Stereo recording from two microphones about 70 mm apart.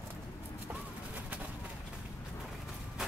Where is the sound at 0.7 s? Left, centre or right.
Right.